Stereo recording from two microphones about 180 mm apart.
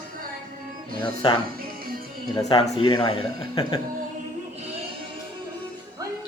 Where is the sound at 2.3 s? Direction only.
25° left (ahead or behind).